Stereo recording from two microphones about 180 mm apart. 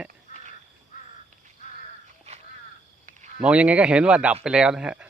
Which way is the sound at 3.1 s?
40° right (ahead or behind).